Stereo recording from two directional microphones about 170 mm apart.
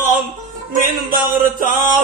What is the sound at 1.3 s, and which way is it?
Music, 50° right (ahead or behind).